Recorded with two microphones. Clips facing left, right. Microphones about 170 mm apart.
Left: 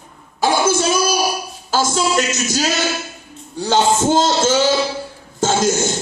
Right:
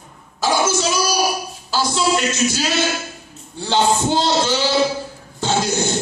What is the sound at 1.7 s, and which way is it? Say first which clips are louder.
A man's voice: left 1 dB; 45° left (ahead or behind).